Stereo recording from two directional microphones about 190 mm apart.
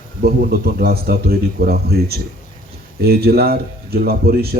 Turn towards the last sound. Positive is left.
turn(degrees=-55)  # may be behind; listen again after turning